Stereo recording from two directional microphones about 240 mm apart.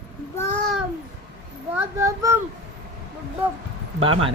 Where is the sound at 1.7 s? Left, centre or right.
Centre.